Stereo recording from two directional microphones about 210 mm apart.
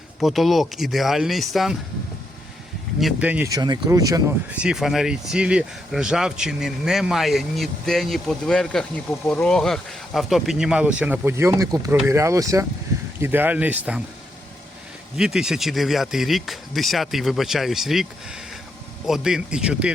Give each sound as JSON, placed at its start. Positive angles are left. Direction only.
{"t": 0.2, "sound": "speech", "side_deg": 0}
{"t": 3.0, "sound": "speech", "side_deg": -5}
{"t": 4.4, "sound": "speech", "side_deg": -5}
{"t": 15.1, "sound": "speech", "side_deg": 0}